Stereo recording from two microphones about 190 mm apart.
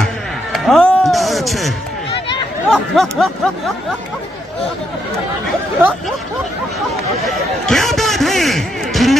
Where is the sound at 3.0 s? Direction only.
Centre (ahead or behind).